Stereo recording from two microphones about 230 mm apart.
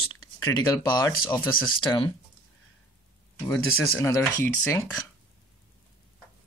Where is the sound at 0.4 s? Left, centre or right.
Centre.